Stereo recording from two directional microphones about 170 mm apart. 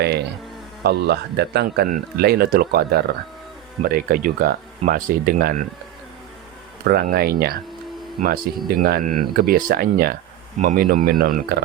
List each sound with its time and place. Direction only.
0.0 s speech: 75° right (ahead or behind)
6.8 s speech: 65° right (ahead or behind)
10.6 s speech: 45° right (ahead or behind)
10.8 s speech: 60° right (ahead or behind)